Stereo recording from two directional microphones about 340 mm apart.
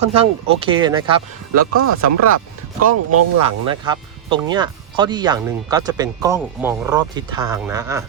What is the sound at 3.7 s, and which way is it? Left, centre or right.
Speech, centre.